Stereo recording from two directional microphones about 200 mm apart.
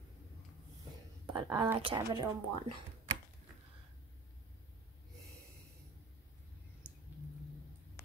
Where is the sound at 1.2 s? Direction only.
25° right (ahead or behind).